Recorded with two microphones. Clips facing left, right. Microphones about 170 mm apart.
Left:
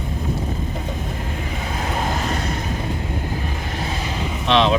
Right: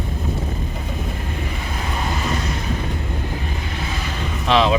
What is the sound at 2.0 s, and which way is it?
Vehicle, 50° left (ahead or behind).